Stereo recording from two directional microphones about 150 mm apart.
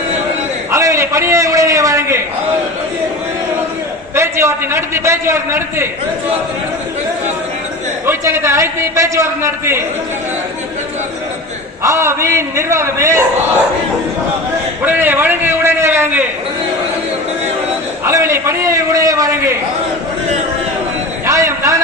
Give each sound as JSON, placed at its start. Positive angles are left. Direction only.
{"t": 0.7, "sound": "a man's voice", "side_deg": -20}
{"t": 4.1, "sound": "a man's voice", "side_deg": -15}
{"t": 8.0, "sound": "a man's voice", "side_deg": -15}
{"t": 11.8, "sound": "a man's voice", "side_deg": -20}
{"t": 14.8, "sound": "a man's voice", "side_deg": -10}
{"t": 18.0, "sound": "a man's voice", "side_deg": -20}
{"t": 21.2, "sound": "a sound", "side_deg": -20}